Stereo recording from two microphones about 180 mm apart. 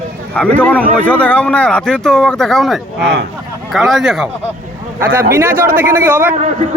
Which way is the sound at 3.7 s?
Centre (ahead or behind).